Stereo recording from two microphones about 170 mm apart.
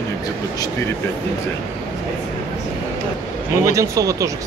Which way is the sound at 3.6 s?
20° right (ahead or behind).